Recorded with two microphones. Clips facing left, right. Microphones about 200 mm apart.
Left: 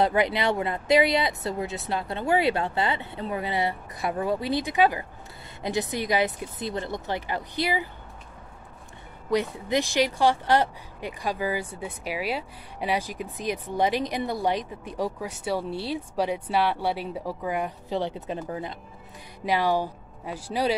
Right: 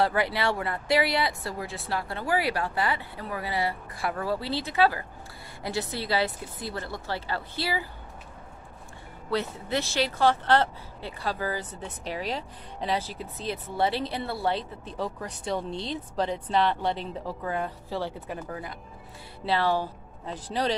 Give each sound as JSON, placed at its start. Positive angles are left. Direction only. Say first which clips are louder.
{"t": 0.0, "sound": "speech", "louder": "left 2 dB", "side_deg": 20}
{"t": 9.3, "sound": "speech", "louder": "left 4 dB", "side_deg": 15}